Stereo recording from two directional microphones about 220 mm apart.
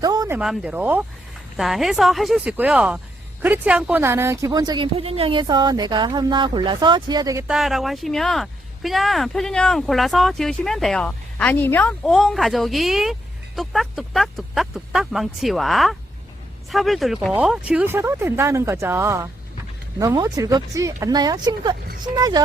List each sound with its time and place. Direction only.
0.0 s a sound: 15° right (ahead or behind)
0.3 s a woman's voice: 5° right (ahead or behind)
7.4 s speech: centre (ahead or behind); by 22.4 s 15° right (ahead or behind)